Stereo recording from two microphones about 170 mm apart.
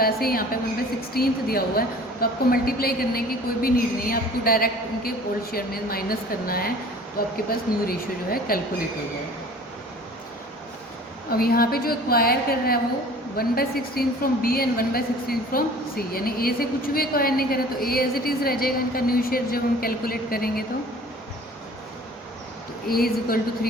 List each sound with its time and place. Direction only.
0.0 s a woman's voice: 60° left (ahead or behind)
11.3 s a woman's voice: 60° left (ahead or behind)
22.9 s a woman's voice: 60° left (ahead or behind)